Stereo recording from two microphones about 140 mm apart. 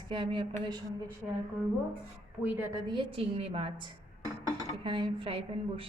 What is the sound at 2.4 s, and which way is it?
Speech, 15° right (ahead or behind).